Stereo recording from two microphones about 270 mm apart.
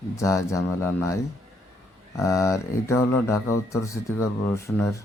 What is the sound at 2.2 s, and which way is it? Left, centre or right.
Speech, centre.